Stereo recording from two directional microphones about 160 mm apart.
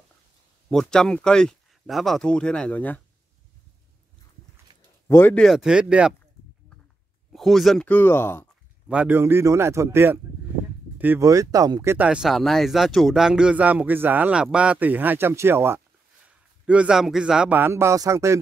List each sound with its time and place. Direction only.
0.7 s speech: 5° left (ahead or behind)
5.0 s speech: 15° left (ahead or behind)
5.4 s speech: centre (ahead or behind)
7.3 s speech: centre (ahead or behind)
8.8 s a man's voice: 5° right (ahead or behind)